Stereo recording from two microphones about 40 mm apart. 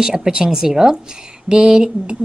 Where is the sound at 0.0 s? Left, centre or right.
Centre.